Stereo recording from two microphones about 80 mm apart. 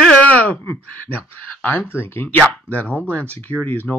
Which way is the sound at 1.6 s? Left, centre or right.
Left.